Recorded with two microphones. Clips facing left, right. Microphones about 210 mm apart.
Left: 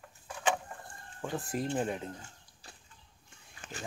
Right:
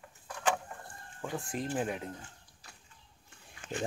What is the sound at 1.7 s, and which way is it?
Speech, 5° right (ahead or behind).